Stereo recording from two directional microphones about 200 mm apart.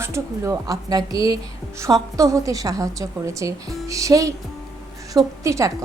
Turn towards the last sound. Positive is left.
turn(degrees=-15)  # may be behind; listen again after turning